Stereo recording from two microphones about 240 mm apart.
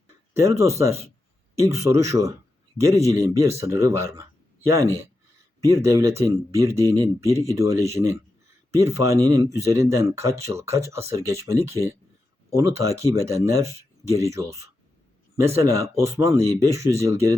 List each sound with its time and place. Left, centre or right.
0.4 s speech: centre